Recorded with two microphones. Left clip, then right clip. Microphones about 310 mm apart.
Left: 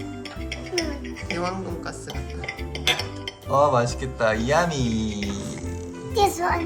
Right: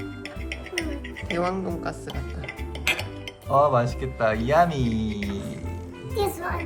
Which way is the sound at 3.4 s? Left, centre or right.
Centre.